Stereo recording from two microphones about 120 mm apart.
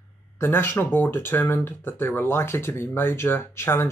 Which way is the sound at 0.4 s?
20° left (ahead or behind).